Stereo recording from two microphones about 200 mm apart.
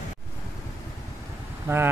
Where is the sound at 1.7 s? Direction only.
10° right (ahead or behind).